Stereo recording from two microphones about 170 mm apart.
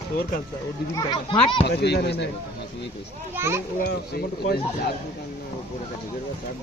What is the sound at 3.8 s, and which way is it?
Speech, 65° left (ahead or behind).